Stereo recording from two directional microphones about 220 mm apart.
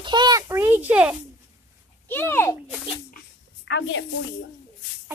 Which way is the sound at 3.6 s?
55° left (ahead or behind).